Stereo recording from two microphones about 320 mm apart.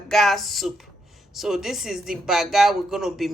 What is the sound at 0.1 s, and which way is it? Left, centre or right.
Speech, centre.